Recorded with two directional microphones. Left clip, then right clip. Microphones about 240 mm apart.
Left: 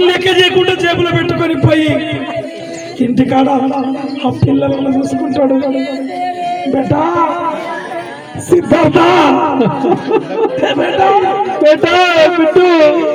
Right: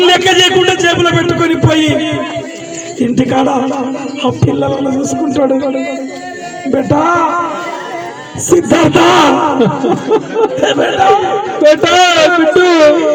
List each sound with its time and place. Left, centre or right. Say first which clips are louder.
0.0 s a sound: right 2 dB; right
3.2 s a man's voice: left 1 dB; right
4.9 s a man's voice: even; right
6.9 s a man's voice: right 3 dB; right
8.4 s a man's voice: right 1 dB; right